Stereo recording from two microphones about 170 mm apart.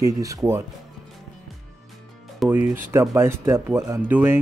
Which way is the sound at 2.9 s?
15° right (ahead or behind).